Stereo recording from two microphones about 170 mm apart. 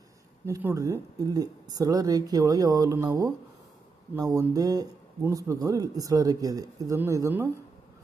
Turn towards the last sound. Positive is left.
turn(degrees=-15)  # may be behind; listen again after turning